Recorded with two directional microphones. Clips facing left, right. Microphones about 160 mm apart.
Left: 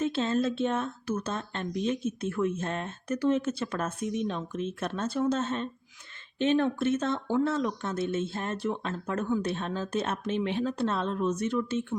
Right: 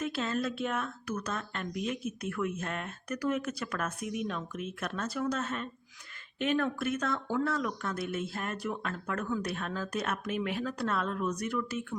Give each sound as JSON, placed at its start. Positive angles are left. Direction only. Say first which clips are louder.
{"t": 0.0, "sound": "speech", "louder": "left 5 dB", "side_deg": 25}